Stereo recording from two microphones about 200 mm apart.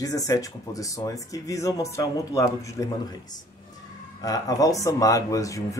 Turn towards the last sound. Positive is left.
turn(degrees=15)  # may be behind; listen again after turning